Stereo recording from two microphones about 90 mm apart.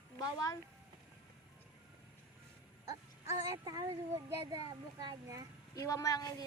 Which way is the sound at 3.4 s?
40° right (ahead or behind).